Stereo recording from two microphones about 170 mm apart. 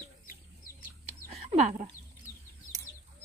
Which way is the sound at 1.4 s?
40° right (ahead or behind).